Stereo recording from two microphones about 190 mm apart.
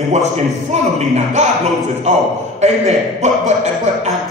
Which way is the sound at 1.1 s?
40° right (ahead or behind).